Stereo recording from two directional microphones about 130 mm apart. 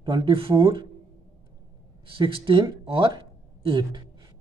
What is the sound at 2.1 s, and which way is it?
Speech, 40° right (ahead or behind).